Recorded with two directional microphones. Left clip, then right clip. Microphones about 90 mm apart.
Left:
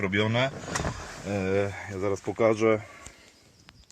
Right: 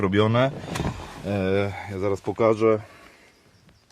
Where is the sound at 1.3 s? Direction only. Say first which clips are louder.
Right 4 dB; 65° right (ahead or behind).